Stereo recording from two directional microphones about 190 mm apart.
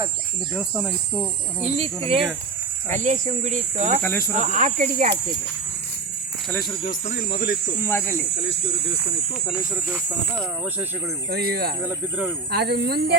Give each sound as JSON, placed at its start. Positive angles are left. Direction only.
{"t": 0.5, "sound": "speech", "side_deg": -5}
{"t": 1.6, "sound": "speech", "side_deg": -35}
{"t": 2.9, "sound": "speech", "side_deg": -40}
{"t": 4.0, "sound": "speech", "side_deg": 10}
{"t": 4.4, "sound": "speech", "side_deg": -40}
{"t": 7.8, "sound": "speech", "side_deg": 10}
{"t": 11.3, "sound": "speech", "side_deg": -55}
{"t": 11.9, "sound": "speech", "side_deg": -10}
{"t": 12.5, "sound": "speech", "side_deg": -60}